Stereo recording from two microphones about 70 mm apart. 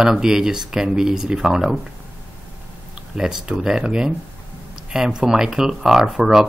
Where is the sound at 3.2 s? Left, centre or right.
Centre.